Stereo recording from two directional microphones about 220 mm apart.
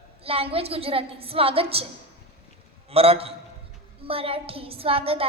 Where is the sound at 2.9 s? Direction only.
25° right (ahead or behind).